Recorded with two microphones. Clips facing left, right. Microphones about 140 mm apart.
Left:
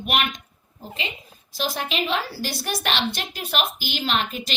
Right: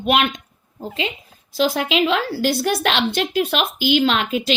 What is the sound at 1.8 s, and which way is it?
A woman's voice, 90° right.